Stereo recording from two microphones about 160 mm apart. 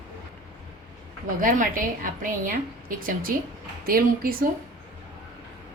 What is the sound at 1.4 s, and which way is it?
A woman's voice, 60° right (ahead or behind).